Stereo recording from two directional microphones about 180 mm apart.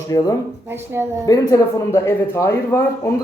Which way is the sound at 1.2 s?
20° left (ahead or behind).